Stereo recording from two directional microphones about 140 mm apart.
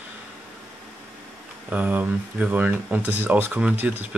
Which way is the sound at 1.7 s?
10° right (ahead or behind).